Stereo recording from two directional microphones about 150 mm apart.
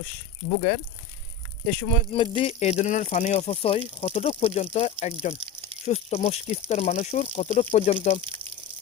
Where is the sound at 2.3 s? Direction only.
40° left (ahead or behind).